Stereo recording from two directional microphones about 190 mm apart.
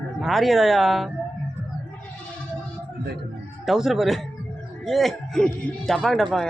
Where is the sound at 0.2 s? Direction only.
Centre (ahead or behind).